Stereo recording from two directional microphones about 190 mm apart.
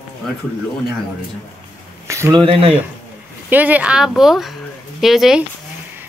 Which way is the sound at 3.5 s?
10° right (ahead or behind).